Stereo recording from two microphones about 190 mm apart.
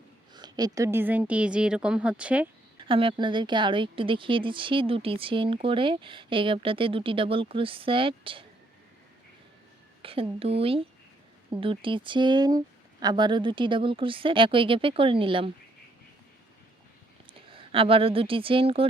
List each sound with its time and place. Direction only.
0.3 s a woman's voice: 20° right (ahead or behind)
2.8 s speech: 25° right (ahead or behind)
10.0 s speech: 30° right (ahead or behind)
17.5 s speech: 30° right (ahead or behind)